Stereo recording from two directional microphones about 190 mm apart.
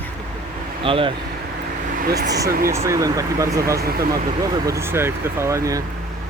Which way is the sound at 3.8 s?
55° right (ahead or behind).